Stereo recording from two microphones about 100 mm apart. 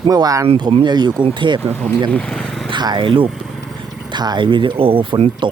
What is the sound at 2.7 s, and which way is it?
Speech, 50° right (ahead or behind).